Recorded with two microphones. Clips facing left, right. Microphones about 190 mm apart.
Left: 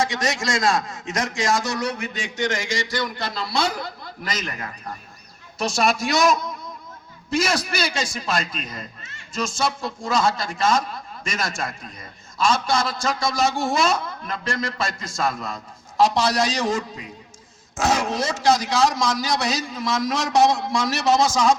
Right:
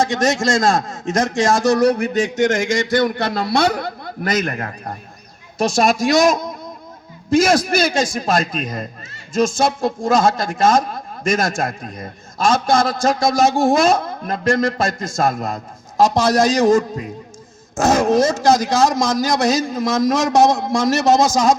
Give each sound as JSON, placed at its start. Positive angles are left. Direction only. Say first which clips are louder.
{"t": 0.0, "sound": "a man's voice", "louder": "right 7 dB", "side_deg": -45}
{"t": 2.0, "sound": "a man's voice", "louder": "right 10 dB", "side_deg": -40}